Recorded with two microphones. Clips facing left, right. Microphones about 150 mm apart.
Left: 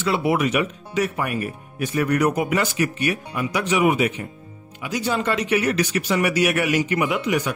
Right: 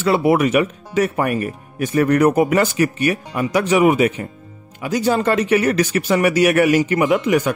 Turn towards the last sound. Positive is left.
turn(degrees=-50)  # may be behind; listen again after turning